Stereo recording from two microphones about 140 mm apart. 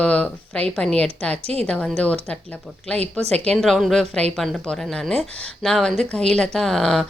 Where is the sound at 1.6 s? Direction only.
5° left (ahead or behind).